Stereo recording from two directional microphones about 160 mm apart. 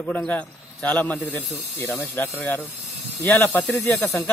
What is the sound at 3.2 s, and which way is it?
Speech, 15° left (ahead or behind).